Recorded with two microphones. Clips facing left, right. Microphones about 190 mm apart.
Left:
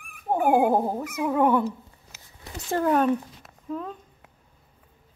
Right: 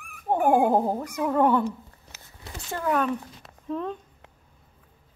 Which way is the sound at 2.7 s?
40° left (ahead or behind).